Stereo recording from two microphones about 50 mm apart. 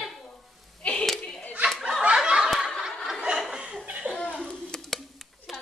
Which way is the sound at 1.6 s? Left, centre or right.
Centre.